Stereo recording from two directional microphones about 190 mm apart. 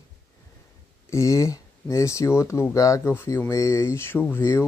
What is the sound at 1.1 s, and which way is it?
Speech, 15° left (ahead or behind).